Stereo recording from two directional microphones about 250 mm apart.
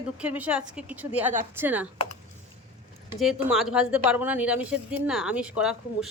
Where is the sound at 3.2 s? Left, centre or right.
Centre.